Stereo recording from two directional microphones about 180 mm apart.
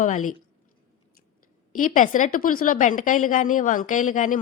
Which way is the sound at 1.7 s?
45° left (ahead or behind).